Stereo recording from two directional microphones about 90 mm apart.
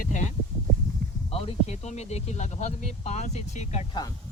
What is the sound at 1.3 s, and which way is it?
Speech, 90° left.